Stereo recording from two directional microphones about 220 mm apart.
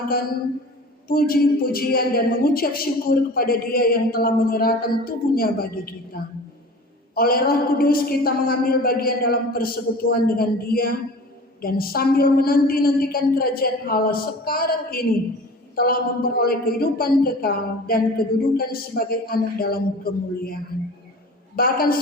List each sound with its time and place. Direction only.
1.0 s a woman's voice: 40° left (ahead or behind)